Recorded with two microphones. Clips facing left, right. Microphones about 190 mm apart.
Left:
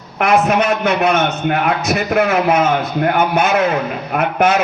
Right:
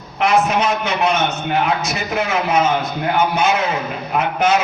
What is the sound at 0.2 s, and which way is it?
A man's voice, 60° left (ahead or behind).